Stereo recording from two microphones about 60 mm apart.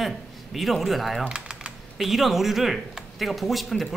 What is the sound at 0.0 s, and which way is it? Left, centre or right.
Speech, centre.